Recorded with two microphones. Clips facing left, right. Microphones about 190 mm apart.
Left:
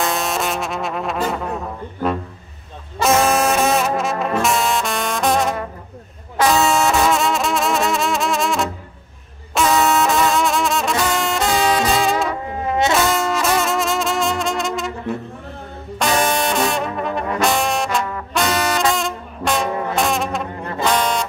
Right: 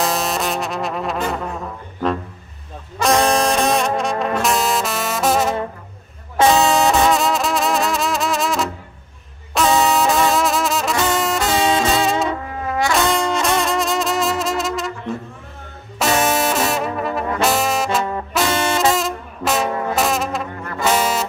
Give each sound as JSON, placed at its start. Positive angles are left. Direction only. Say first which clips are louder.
{"t": 0.0, "sound": "music", "louder": "right 1 dB", "side_deg": 0}
{"t": 3.0, "sound": "brass instrument", "louder": "even", "side_deg": 5}
{"t": 6.5, "sound": "music", "louder": "left 1 dB", "side_deg": 0}
{"t": 9.5, "sound": "brass instrument", "louder": "even", "side_deg": 0}
{"t": 11.8, "sound": "music", "louder": "even", "side_deg": 0}
{"t": 12.4, "sound": "brass instrument", "louder": "left 2 dB", "side_deg": 20}
{"t": 12.9, "sound": "music", "louder": "even", "side_deg": 0}
{"t": 16.3, "sound": "brass instrument", "louder": "even", "side_deg": 0}
{"t": 18.5, "sound": "brass instrument", "louder": "even", "side_deg": -25}
{"t": 18.8, "sound": "music", "louder": "right 2 dB", "side_deg": 0}